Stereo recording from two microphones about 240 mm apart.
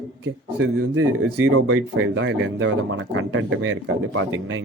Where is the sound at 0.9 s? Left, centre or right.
Right.